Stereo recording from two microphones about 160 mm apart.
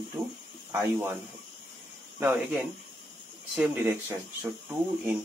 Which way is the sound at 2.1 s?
10° right (ahead or behind).